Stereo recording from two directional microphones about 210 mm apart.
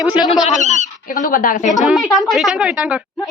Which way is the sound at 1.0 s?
40° left (ahead or behind).